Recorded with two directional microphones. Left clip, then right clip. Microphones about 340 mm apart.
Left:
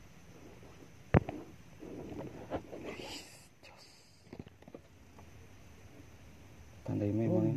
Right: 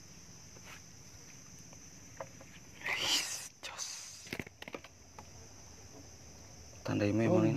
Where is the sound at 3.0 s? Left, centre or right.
Right.